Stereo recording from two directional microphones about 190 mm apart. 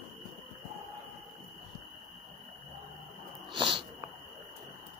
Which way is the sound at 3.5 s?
25° right (ahead or behind).